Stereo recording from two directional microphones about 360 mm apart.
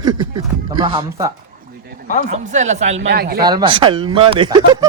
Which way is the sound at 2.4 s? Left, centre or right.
Centre.